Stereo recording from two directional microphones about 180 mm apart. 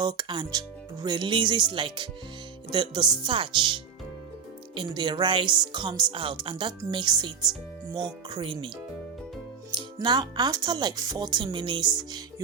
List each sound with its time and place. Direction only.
0.0 s speech: 25° right (ahead or behind)
9.7 s speech: 25° right (ahead or behind)